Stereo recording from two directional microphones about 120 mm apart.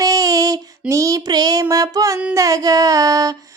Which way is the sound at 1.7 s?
30° right (ahead or behind).